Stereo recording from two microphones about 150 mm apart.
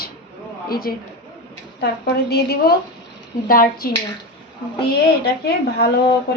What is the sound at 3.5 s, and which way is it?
Speech, 75° left (ahead or behind).